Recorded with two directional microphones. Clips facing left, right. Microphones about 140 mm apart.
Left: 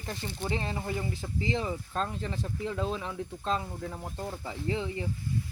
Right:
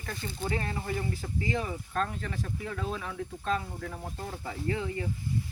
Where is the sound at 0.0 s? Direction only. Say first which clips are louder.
Even; 25° left (ahead or behind).